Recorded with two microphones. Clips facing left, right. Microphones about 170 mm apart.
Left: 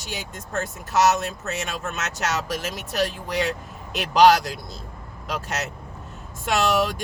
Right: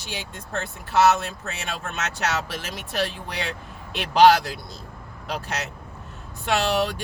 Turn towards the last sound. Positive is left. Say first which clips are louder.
# left 1 dB
turn(degrees=45)  # may be behind; listen again after turning